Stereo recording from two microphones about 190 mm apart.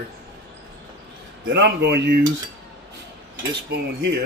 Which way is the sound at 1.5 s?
70° right (ahead or behind).